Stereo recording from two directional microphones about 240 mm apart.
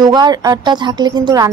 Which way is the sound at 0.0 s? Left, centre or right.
Centre.